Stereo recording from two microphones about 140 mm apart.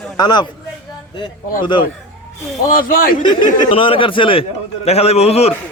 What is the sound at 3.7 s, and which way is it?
A man's voice, 40° left (ahead or behind).